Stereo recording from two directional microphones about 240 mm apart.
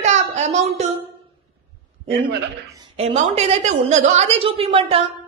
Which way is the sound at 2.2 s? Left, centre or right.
Centre.